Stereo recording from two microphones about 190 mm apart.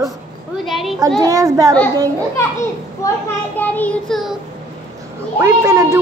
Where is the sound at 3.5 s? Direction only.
10° left (ahead or behind).